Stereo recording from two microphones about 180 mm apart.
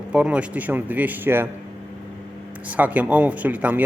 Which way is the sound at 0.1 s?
5° right (ahead or behind).